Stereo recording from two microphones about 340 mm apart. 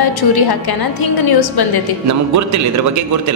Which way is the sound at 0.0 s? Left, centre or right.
Left.